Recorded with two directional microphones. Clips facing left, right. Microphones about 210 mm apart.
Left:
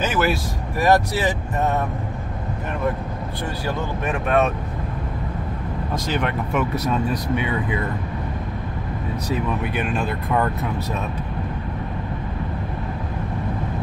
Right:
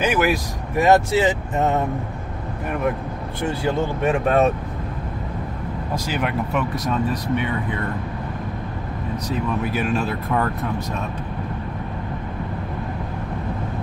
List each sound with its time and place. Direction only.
0.0 s speech: 15° right (ahead or behind)
3.4 s speech: 25° right (ahead or behind)
6.0 s speech: 10° right (ahead or behind)
9.6 s speech: 5° right (ahead or behind)